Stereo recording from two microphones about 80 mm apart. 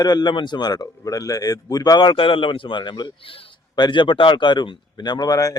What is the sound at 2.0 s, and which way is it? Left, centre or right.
Speech, left.